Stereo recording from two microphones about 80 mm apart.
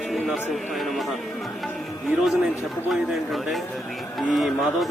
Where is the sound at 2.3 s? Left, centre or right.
Centre.